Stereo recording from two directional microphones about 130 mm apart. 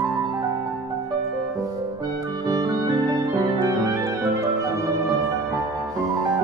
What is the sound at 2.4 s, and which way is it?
Music, 30° right (ahead or behind).